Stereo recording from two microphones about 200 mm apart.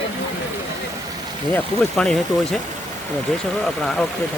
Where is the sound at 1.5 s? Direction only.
5° left (ahead or behind).